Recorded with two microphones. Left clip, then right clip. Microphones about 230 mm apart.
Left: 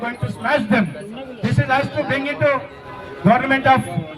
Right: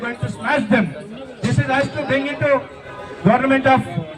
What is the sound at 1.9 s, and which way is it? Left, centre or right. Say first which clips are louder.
A man's voice: even; left.